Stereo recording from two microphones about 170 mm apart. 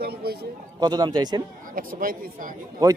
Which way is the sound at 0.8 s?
25° right (ahead or behind).